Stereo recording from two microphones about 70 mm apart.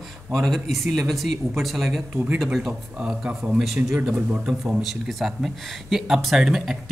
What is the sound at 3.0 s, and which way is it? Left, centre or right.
Speech, centre.